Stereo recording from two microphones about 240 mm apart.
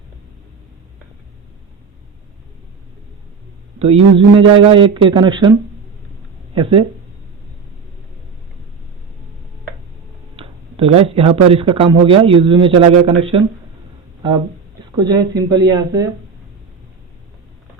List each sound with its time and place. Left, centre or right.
3.8 s speech: right
10.3 s speech: right
14.9 s speech: centre